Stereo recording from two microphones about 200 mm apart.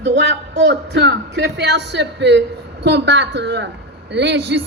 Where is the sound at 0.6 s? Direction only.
60° right (ahead or behind).